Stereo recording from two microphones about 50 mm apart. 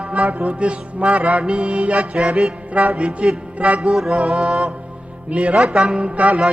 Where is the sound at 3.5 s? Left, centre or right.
Right.